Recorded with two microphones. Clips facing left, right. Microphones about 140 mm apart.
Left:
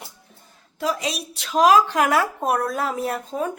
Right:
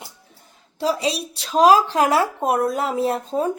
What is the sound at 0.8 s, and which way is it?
A woman's voice, 30° right (ahead or behind).